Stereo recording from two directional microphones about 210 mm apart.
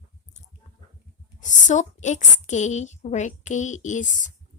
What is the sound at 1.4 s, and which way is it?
A woman's voice, 35° left (ahead or behind).